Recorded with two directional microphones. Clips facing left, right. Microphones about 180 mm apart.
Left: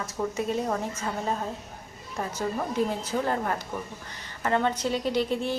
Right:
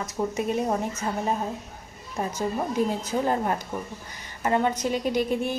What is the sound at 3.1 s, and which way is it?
A woman's voice, 15° right (ahead or behind).